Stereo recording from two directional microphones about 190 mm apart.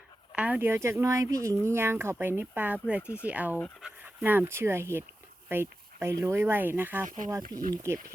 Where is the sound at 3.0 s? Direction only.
10° left (ahead or behind).